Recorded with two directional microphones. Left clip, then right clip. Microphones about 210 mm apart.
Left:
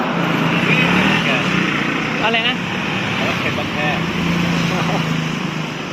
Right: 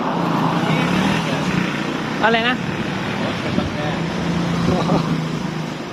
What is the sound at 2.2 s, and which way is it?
Vehicle, 40° right (ahead or behind).